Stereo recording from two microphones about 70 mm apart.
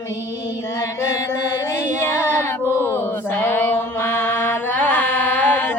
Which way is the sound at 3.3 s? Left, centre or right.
Left.